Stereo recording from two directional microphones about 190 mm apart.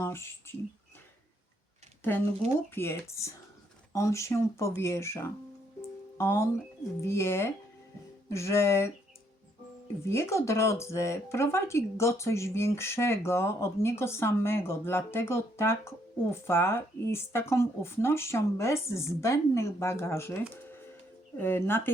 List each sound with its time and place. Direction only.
0.0 s speech: 15° left (ahead or behind)
2.7 s speech: 15° left (ahead or behind)
10.0 s speech: 15° left (ahead or behind)